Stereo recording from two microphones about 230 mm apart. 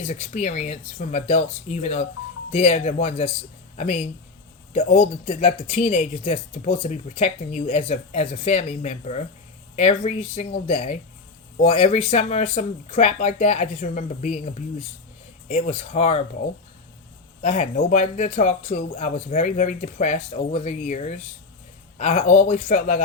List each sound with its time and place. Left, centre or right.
0.1 s speech: left
17.4 s speech: left